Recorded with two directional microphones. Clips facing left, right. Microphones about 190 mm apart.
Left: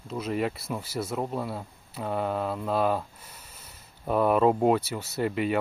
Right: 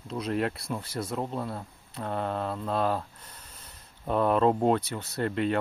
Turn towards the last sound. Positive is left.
turn(degrees=5)  # may be behind; listen again after turning